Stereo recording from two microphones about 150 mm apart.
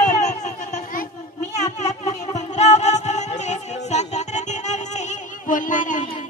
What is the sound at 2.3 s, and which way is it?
Music, 50° left (ahead or behind).